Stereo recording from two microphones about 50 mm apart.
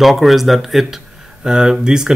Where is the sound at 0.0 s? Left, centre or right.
Centre.